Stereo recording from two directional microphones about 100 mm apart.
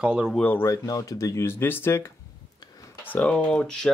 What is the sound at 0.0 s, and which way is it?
Speech, 10° right (ahead or behind).